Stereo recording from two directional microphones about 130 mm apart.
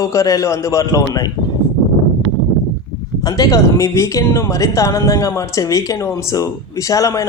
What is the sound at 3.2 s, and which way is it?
A woman's voice, 25° left (ahead or behind).